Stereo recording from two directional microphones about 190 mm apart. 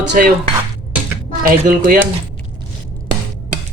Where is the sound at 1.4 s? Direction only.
45° right (ahead or behind).